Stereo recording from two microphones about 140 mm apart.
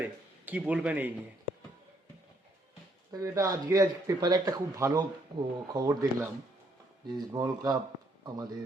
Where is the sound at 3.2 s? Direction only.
20° right (ahead or behind).